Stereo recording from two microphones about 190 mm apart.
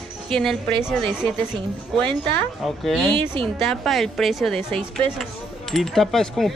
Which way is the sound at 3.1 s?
25° right (ahead or behind).